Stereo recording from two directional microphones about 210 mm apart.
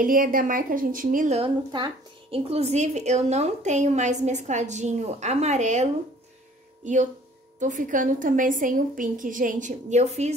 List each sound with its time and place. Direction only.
0.0 s a woman's voice: 40° right (ahead or behind)